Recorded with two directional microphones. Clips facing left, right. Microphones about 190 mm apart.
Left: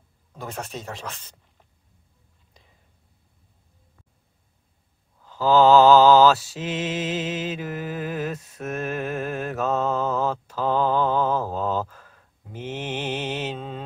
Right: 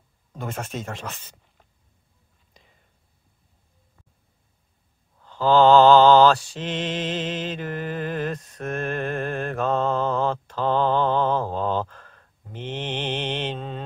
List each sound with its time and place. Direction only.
0.4 s mantra: centre (ahead or behind)
5.2 s mantra: 5° left (ahead or behind)